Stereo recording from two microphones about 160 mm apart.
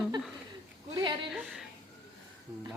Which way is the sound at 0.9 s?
30° right (ahead or behind).